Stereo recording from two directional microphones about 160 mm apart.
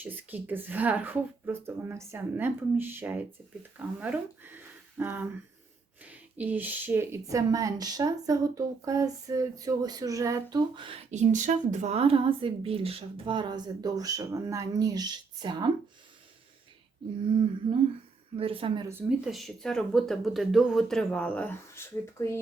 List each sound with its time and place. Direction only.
0.0 s a woman's voice: 10° right (ahead or behind); by 11.0 s 30° right (ahead or behind)
11.1 s speech: 50° right (ahead or behind); by 15.7 s 25° right (ahead or behind)
18.3 s speech: 35° right (ahead or behind)
18.9 s speech: 10° right (ahead or behind); by 22.4 s 15° left (ahead or behind)